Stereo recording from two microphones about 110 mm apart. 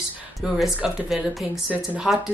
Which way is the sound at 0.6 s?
Centre (ahead or behind).